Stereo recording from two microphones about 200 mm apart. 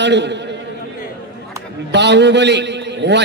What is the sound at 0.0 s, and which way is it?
Speech, 60° right (ahead or behind).